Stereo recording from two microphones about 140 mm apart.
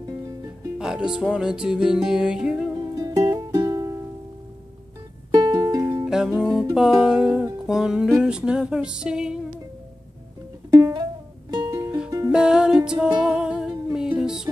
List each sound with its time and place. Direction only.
0.7 s music: 5° right (ahead or behind)
2.9 s music: 25° right (ahead or behind)
5.3 s music: 30° right (ahead or behind)
6.0 s music: 5° right (ahead or behind)
10.7 s music: 25° right (ahead or behind)
12.3 s music: 5° right (ahead or behind)